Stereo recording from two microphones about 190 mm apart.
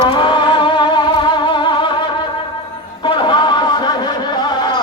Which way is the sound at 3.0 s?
25° left (ahead or behind).